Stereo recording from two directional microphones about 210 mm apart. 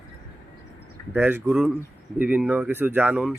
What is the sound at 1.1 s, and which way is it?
Speech, 10° right (ahead or behind).